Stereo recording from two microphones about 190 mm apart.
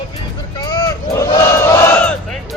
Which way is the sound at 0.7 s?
15° left (ahead or behind).